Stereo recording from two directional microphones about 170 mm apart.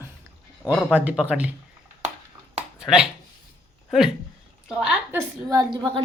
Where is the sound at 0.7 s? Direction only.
5° left (ahead or behind).